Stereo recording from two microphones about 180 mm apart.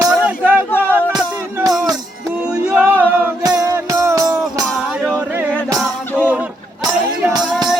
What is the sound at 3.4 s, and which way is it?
Music, 20° right (ahead or behind).